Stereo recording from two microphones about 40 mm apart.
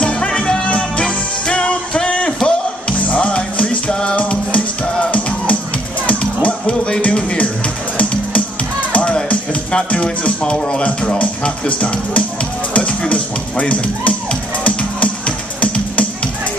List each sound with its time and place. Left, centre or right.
0.0 s music: left
8.9 s speech: left
14.6 s music: left